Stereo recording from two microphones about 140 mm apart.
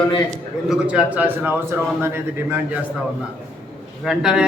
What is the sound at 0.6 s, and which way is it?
Speech, 10° right (ahead or behind).